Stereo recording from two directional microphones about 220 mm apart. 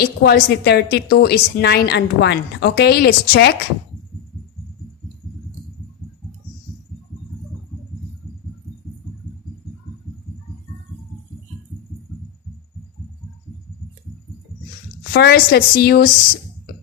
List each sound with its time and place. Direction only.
0.0 s a woman's voice: 45° left (ahead or behind)
15.1 s a woman's voice: 45° left (ahead or behind)